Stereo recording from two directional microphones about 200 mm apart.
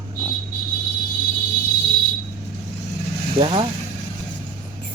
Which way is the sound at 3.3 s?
25° right (ahead or behind).